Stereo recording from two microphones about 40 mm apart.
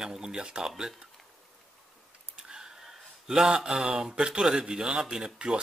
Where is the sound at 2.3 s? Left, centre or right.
Centre.